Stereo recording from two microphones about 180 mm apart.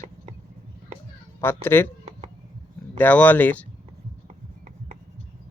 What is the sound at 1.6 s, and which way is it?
Speech, 10° left (ahead or behind).